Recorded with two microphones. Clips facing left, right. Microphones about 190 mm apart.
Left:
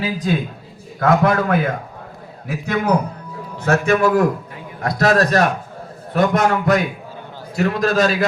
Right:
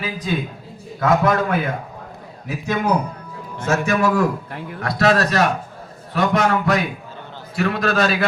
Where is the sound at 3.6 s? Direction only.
55° left (ahead or behind).